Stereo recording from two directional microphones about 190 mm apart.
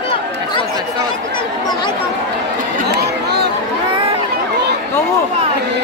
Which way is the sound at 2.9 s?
60° right (ahead or behind).